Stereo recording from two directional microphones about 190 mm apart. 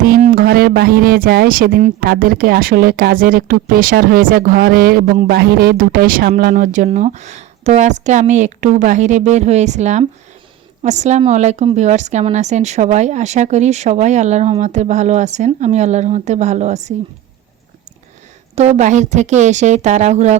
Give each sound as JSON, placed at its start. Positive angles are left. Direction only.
{"t": 0.0, "sound": "a woman's voice", "side_deg": -45}
{"t": 18.5, "sound": "a woman's voice", "side_deg": -35}